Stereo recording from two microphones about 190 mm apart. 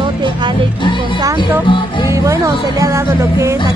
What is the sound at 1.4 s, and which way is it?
Music, 25° left (ahead or behind).